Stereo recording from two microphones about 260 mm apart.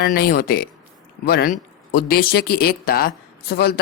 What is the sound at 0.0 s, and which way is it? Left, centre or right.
Speech, left.